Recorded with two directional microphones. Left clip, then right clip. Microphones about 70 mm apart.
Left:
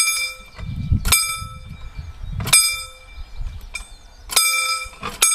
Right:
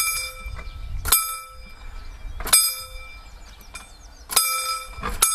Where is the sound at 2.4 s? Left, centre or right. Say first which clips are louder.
Left 5 dB; left.